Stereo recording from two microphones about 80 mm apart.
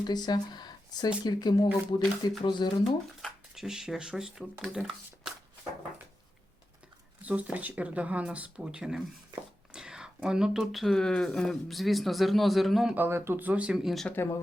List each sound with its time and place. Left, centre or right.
0.0 s speech: left
3.2 s speech: centre
7.2 s a man's voice: centre
13.1 s speech: right; by 13.7 s centre
13.7 s a man's voice: centre